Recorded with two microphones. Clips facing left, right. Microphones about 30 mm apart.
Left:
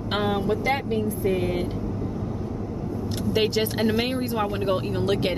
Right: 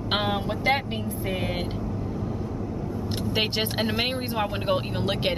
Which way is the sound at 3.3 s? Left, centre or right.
Right.